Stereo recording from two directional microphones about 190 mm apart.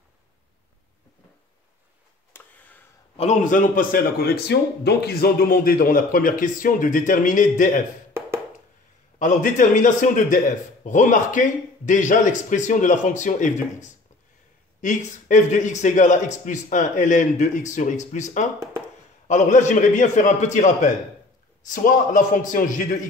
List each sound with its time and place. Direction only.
2.3 s a sound: 10° left (ahead or behind)
3.2 s a man's voice: 40° left (ahead or behind)
9.2 s a man's voice: 40° left (ahead or behind)